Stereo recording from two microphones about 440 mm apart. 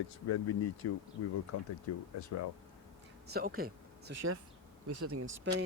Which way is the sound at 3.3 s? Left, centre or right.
Centre.